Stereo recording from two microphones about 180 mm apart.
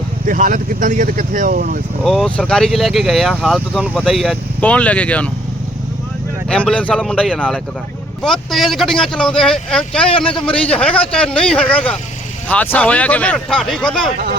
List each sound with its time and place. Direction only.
0.3 s speech: 50° right (ahead or behind)
2.0 s speech: 5° left (ahead or behind)
6.5 s speech: 5° left (ahead or behind)